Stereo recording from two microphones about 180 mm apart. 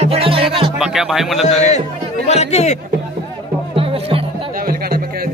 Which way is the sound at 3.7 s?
30° right (ahead or behind).